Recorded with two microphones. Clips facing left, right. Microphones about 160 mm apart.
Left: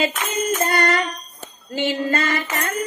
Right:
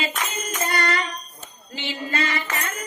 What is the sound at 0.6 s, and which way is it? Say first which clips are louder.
Tambourine: left 2 dB; 50° left (ahead or behind).